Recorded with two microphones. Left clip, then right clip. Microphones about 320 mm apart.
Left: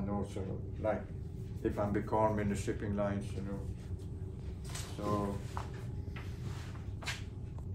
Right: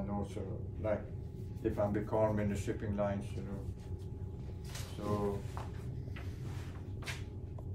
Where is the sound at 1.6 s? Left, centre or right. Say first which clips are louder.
Even; centre.